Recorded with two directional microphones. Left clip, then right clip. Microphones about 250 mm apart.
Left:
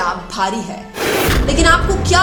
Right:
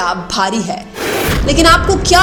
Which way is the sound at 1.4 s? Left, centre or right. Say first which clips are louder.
Right 6 dB; right.